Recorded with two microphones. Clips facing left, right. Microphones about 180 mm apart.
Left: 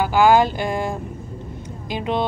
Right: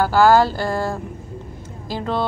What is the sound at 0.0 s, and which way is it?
Speech, 15° left (ahead or behind).